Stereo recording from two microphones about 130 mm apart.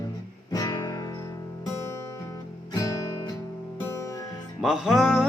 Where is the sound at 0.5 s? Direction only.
25° left (ahead or behind).